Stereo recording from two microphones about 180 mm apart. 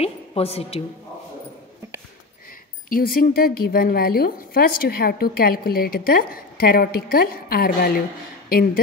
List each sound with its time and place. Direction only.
0.0 s a woman's voice: 35° left (ahead or behind)
2.9 s a woman's voice: 55° left (ahead or behind)